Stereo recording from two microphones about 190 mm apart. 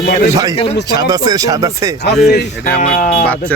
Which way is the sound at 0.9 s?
20° right (ahead or behind).